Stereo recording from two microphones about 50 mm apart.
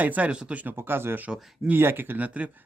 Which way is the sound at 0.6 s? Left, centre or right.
Right.